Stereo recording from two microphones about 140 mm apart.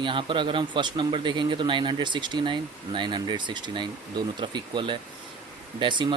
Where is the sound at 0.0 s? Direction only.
35° right (ahead or behind).